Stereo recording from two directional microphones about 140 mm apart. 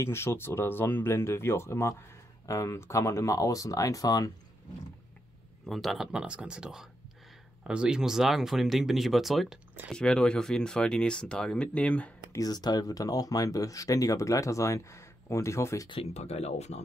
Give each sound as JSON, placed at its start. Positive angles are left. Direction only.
{"t": 0.0, "sound": "speech", "side_deg": 20}
{"t": 5.7, "sound": "speech", "side_deg": 0}
{"t": 12.4, "sound": "speech", "side_deg": 30}
{"t": 15.9, "sound": "speech", "side_deg": 45}